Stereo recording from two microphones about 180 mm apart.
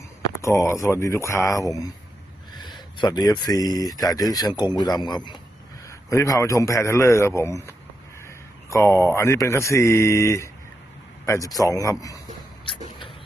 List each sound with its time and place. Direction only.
0.4 s a man's voice: 15° left (ahead or behind)
3.0 s a man's voice: 20° left (ahead or behind)